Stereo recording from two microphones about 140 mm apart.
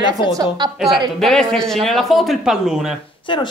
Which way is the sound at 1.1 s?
Centre (ahead or behind).